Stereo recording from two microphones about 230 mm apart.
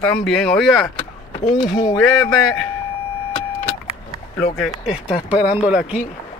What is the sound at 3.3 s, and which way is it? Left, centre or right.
Vehicle, left.